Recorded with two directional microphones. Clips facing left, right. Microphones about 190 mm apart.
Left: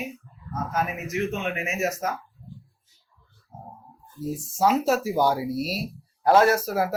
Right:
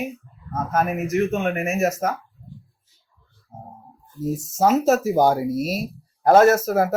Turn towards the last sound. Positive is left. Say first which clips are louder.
# right 5 dB
turn(degrees=-45)  # may be behind; listen again after turning